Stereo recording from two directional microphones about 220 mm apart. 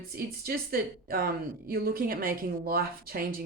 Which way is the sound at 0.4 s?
45° right (ahead or behind).